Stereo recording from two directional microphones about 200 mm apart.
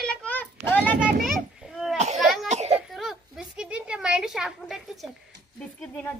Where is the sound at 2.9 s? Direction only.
Centre (ahead or behind).